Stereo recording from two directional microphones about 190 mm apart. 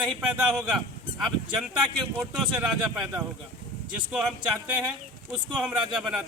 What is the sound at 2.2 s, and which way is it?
Speech, 5° right (ahead or behind).